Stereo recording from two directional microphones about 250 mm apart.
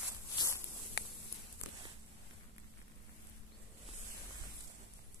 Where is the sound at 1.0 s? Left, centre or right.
Left.